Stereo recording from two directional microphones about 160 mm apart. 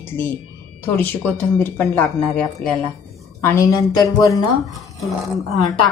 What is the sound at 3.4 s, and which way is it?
Speech, 15° left (ahead or behind).